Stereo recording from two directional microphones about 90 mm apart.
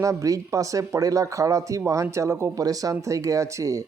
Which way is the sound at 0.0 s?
35° right (ahead or behind).